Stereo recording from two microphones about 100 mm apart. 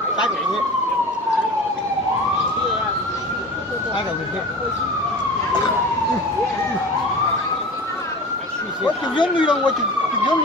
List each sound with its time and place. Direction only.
8.8 s speech: 50° left (ahead or behind)